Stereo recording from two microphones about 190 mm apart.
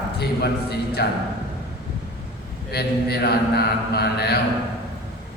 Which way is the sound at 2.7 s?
60° left (ahead or behind).